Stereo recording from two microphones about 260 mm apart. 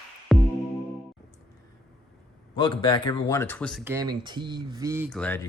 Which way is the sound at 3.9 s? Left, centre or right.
Centre.